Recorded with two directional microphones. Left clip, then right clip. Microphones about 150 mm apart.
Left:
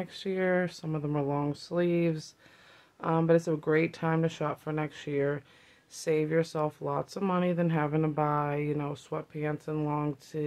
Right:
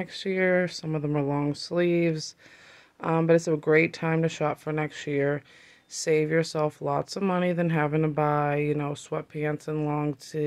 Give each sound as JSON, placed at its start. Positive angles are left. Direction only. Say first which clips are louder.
{"t": 0.0, "sound": "speech", "louder": "right 5 dB", "side_deg": -25}